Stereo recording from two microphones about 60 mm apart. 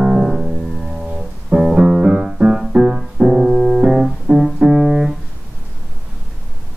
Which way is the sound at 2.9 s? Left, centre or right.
Centre.